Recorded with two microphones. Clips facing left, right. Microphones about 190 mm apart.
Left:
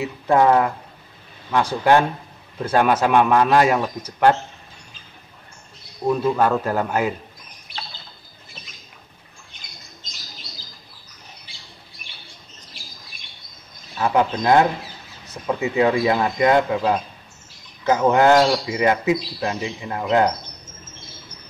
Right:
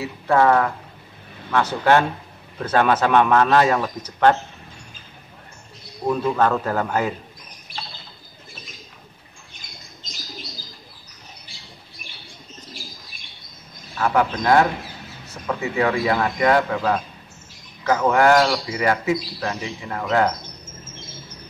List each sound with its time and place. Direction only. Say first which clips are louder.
0.0 s a man's voice: left 1 dB; 15° left (ahead or behind)
6.0 s a man's voice: left 1 dB; 5° left (ahead or behind)
13.9 s speech: left 1 dB; 20° left (ahead or behind)